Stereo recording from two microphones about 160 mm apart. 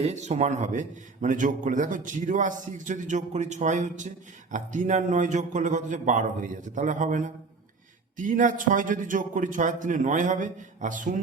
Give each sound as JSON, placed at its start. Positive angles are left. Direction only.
{"t": 0.0, "sound": "a man's voice", "side_deg": -45}